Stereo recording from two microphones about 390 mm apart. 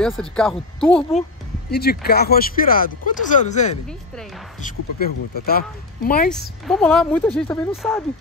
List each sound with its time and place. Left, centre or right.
0.0 s speech: centre
1.7 s speech: left
5.0 s speech: left
6.7 s speech: centre